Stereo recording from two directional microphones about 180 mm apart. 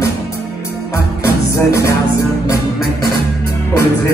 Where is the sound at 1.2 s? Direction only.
15° left (ahead or behind).